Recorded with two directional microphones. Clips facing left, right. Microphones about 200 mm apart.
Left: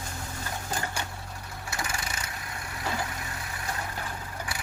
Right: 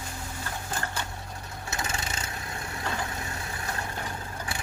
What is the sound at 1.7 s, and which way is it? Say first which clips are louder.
Vehicle: right 1 dB; 25° right (ahead or behind).